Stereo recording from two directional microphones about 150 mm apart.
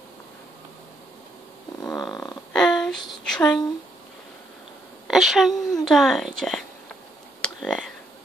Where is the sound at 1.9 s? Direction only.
25° left (ahead or behind).